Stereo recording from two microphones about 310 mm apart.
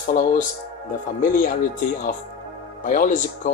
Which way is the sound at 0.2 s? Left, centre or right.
Left.